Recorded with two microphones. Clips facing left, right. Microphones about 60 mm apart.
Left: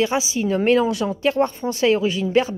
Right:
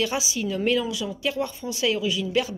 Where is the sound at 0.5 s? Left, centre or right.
Left.